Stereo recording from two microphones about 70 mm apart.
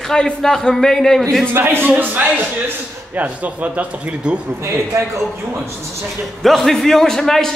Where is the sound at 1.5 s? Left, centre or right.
Right; by 4.4 s centre.